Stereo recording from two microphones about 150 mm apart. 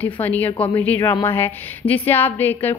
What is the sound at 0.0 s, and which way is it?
A woman's voice, 10° left (ahead or behind).